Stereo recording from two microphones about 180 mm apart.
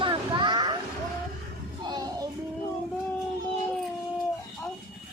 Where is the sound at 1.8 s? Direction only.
20° right (ahead or behind).